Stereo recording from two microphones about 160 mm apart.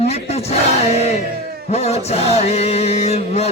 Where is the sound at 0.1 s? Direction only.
40° left (ahead or behind).